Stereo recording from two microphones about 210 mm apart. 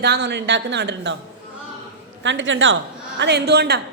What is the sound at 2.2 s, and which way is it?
A man's voice, 60° right (ahead or behind).